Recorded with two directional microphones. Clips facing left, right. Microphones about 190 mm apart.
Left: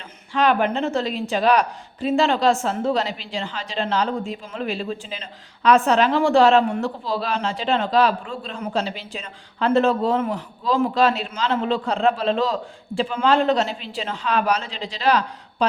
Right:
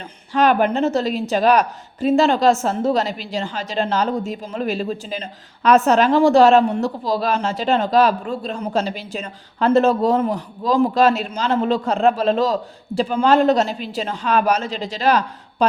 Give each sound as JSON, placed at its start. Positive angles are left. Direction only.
{"t": 0.3, "sound": "a woman's voice", "side_deg": -45}